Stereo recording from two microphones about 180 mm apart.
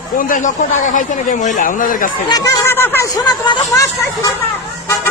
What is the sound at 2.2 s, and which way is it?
Speech, 20° left (ahead or behind).